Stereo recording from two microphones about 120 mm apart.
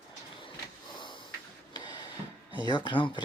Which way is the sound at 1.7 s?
40° left (ahead or behind).